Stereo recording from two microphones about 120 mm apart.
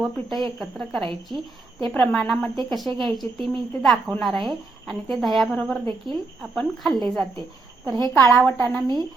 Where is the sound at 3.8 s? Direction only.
Centre (ahead or behind).